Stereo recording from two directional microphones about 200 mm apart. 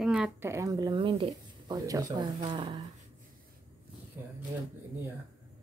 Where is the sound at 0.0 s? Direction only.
5° right (ahead or behind); by 2.8 s 25° right (ahead or behind).